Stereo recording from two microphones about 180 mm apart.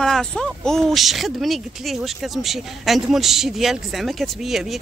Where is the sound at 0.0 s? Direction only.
Centre (ahead or behind).